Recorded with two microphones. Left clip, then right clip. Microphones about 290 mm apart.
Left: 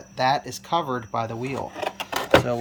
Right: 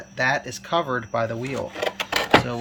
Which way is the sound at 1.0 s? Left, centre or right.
Left.